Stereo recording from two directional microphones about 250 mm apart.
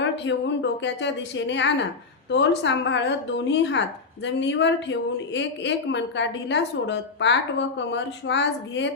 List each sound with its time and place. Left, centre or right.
0.0 s a woman's voice: left